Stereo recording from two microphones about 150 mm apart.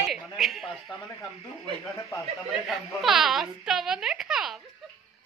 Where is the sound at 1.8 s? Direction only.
20° left (ahead or behind).